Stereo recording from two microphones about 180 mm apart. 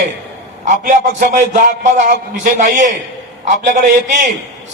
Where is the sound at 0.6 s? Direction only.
45° right (ahead or behind).